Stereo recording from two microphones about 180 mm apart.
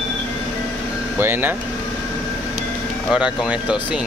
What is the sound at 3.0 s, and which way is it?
Speech, 5° right (ahead or behind).